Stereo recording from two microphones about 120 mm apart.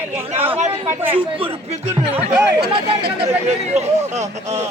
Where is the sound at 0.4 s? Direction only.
55° right (ahead or behind).